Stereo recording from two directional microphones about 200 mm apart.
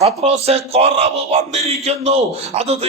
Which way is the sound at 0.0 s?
30° right (ahead or behind).